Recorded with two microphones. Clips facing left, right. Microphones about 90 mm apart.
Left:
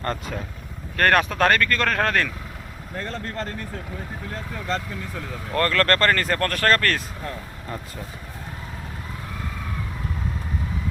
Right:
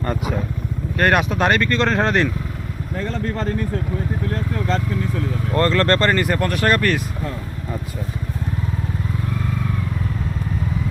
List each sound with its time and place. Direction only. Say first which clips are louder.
0.0 s speech: right 5 dB; 10° right (ahead or behind)
5.5 s speech: right 3 dB; 20° right (ahead or behind)